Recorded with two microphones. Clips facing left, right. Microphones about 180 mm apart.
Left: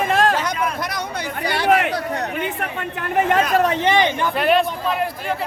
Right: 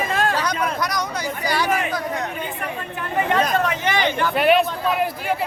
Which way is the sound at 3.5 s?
35° left (ahead or behind).